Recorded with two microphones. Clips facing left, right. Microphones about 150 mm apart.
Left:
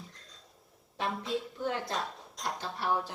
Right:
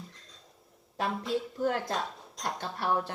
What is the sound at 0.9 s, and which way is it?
Speech, centre (ahead or behind).